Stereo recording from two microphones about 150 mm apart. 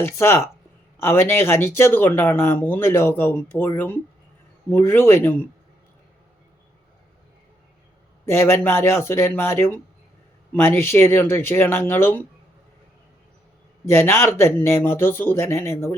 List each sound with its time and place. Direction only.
0.0 s speech: 15° left (ahead or behind)
8.3 s speech: 15° left (ahead or behind)
13.8 s speech: 15° left (ahead or behind)